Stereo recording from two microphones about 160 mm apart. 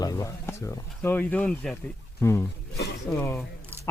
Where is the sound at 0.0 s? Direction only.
20° left (ahead or behind).